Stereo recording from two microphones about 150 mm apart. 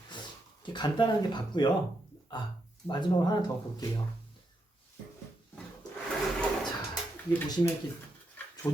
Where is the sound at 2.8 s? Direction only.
30° left (ahead or behind).